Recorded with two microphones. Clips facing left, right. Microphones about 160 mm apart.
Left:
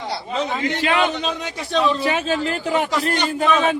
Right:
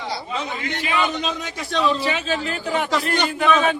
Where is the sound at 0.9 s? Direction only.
60° left (ahead or behind).